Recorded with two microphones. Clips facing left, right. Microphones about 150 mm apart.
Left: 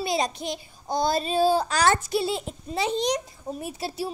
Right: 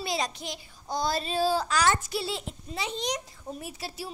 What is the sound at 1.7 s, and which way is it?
Speech, 30° left (ahead or behind).